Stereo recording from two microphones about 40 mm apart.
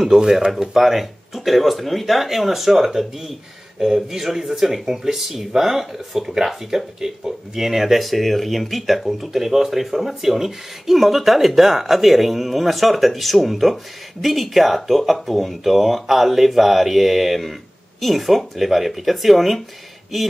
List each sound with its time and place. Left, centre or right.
0.2 s speech: centre
0.5 s speech: centre